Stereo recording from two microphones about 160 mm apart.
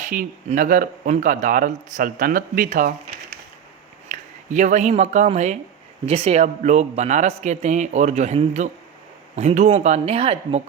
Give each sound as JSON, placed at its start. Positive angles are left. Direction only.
{"t": 0.0, "sound": "speech", "side_deg": -55}
{"t": 4.1, "sound": "a man's voice", "side_deg": -50}